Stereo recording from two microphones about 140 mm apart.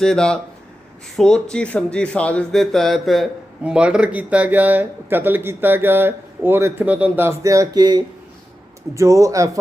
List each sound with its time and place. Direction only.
0.0 s speech: 5° left (ahead or behind); by 9.5 s 25° right (ahead or behind)